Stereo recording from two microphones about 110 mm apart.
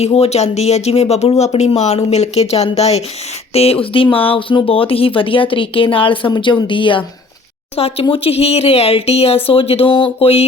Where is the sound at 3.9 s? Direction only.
55° left (ahead or behind).